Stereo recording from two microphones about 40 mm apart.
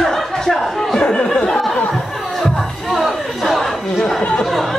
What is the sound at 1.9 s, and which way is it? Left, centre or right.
Chatter, centre.